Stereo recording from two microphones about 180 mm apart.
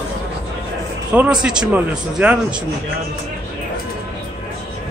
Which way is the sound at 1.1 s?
5° right (ahead or behind).